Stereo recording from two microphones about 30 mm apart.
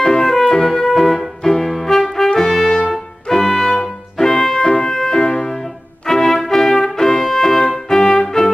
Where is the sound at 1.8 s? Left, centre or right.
Centre.